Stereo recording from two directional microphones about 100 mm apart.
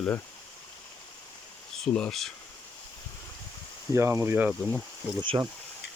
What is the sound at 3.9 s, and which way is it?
Speech, 25° right (ahead or behind).